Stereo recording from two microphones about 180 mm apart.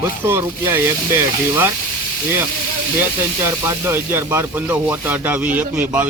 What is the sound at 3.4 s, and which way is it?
Speech, 15° right (ahead or behind).